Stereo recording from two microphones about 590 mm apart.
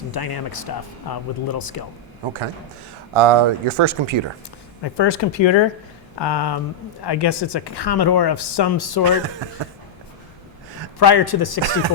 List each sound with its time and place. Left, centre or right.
0.1 s speech: left
3.2 s speech: right
4.8 s speech: left
9.0 s speech: right
11.0 s speech: left
11.6 s speech: right